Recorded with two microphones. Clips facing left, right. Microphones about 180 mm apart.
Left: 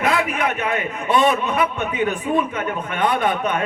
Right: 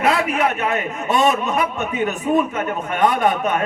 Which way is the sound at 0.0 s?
35° right (ahead or behind).